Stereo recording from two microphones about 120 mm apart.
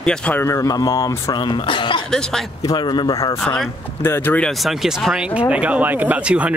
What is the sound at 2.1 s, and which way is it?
Speech, 5° left (ahead or behind).